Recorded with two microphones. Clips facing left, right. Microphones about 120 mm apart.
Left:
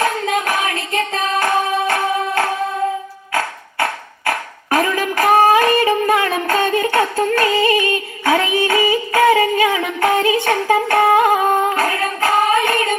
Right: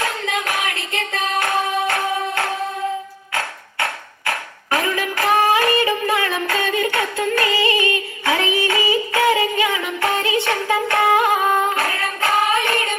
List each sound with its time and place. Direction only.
0.0 s hands: 45° left (ahead or behind)
3.3 s a sound: 35° left (ahead or behind)
4.7 s music: 45° left (ahead or behind); by 10.3 s 30° left (ahead or behind)
10.4 s singing: 35° left (ahead or behind)